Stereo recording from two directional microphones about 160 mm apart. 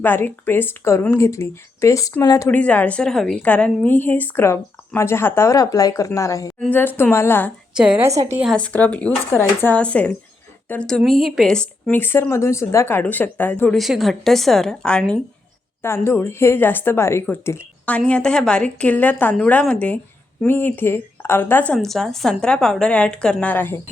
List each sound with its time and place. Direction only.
0.0 s a woman's voice: 15° left (ahead or behind)
2.5 s a woman's voice: 10° left (ahead or behind)
7.8 s a woman's voice: 5° right (ahead or behind)
8.4 s a woman's voice: 5° left (ahead or behind)
13.7 s a woman's voice: centre (ahead or behind)